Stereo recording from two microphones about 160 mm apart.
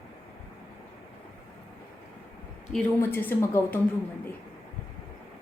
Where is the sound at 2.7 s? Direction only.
15° left (ahead or behind).